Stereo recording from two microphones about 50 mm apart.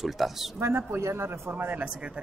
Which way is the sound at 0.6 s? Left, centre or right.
Right.